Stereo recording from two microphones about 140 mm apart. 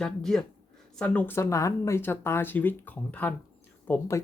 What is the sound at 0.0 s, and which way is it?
Speech, 5° left (ahead or behind).